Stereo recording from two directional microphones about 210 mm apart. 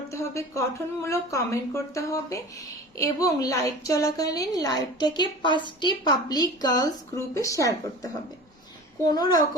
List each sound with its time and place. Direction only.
0.1 s a woman's voice: 15° left (ahead or behind)